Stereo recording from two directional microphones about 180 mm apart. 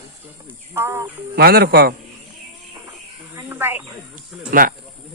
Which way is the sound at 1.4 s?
60° right (ahead or behind).